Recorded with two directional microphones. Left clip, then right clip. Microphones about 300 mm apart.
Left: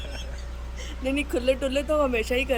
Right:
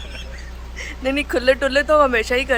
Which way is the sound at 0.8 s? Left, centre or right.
Centre.